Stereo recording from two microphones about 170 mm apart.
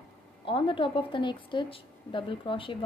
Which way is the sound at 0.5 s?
30° left (ahead or behind).